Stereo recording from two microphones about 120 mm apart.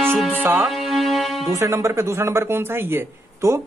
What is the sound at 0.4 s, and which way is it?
Music, 20° right (ahead or behind).